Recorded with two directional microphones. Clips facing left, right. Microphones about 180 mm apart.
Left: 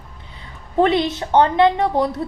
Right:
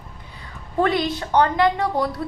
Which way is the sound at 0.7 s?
20° left (ahead or behind).